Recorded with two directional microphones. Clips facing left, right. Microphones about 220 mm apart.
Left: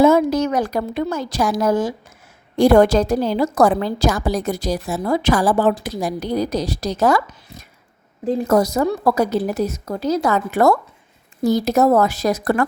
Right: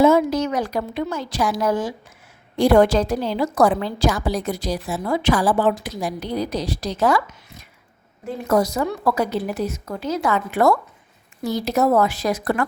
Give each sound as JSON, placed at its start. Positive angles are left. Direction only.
{"t": 0.0, "sound": "a woman's voice", "side_deg": 45}